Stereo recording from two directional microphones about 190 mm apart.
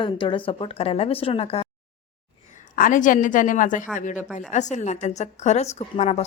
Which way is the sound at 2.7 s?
45° left (ahead or behind).